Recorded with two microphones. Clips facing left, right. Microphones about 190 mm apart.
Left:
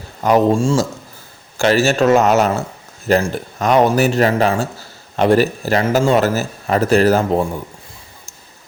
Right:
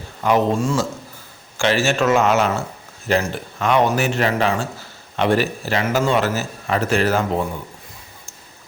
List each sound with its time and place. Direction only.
0.2 s a man's voice: 40° left (ahead or behind)